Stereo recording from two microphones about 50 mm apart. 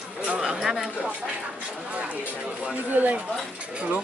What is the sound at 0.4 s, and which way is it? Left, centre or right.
Speech, centre.